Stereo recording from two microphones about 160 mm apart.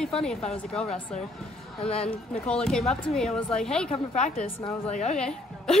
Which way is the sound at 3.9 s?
45° left (ahead or behind).